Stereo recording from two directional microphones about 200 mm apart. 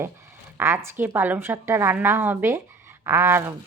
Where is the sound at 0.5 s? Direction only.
10° right (ahead or behind).